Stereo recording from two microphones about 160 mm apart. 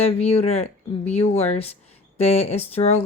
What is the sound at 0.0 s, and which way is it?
Speech, 40° left (ahead or behind).